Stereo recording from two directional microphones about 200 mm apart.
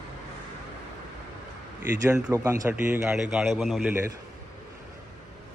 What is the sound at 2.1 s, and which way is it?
A man's voice, 10° right (ahead or behind).